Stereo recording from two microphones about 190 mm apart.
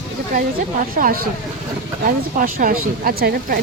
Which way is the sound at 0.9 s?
45° right (ahead or behind).